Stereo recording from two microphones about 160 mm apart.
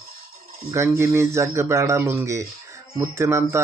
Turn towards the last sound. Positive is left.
turn(degrees=-15)  # may be behind; listen again after turning